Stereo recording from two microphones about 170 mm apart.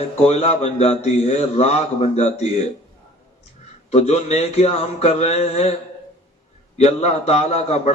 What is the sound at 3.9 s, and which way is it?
A man's voice, 40° left (ahead or behind).